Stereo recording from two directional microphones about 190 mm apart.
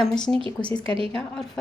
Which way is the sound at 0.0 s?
5° left (ahead or behind).